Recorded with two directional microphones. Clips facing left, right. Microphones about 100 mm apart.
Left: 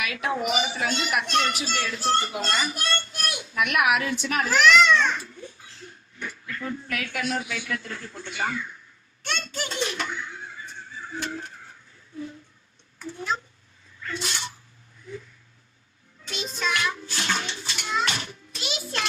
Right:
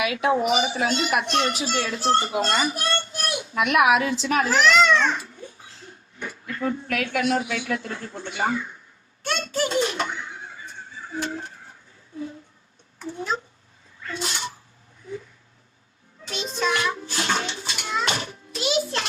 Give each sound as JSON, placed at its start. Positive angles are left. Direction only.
{"t": 0.0, "sound": "speech", "side_deg": -20}
{"t": 0.3, "sound": "a child's voice", "side_deg": -30}
{"t": 6.1, "sound": "a sound", "side_deg": -25}
{"t": 6.9, "sound": "speech", "side_deg": -20}
{"t": 11.1, "sound": "a sound", "side_deg": -30}
{"t": 13.0, "sound": "a woman's voice", "side_deg": -25}
{"t": 16.2, "sound": "bathtub", "side_deg": -35}